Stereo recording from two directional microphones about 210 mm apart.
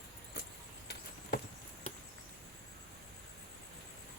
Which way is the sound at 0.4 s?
50° left (ahead or behind).